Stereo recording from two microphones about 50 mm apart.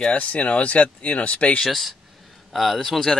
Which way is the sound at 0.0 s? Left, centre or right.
Left.